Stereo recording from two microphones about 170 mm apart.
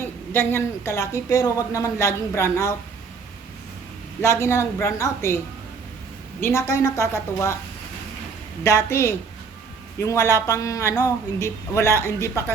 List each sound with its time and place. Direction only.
0.0 s a woman's voice: 15° left (ahead or behind)
4.2 s a woman's voice: 15° left (ahead or behind)
6.4 s a woman's voice: 15° left (ahead or behind)
8.6 s a woman's voice: 15° left (ahead or behind)